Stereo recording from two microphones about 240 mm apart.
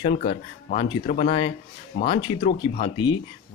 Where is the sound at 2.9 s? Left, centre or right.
Centre.